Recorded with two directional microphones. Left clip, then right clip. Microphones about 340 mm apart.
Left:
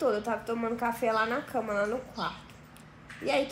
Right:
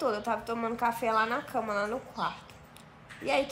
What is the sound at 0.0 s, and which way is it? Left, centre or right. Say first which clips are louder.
Speech: left 1 dB; centre.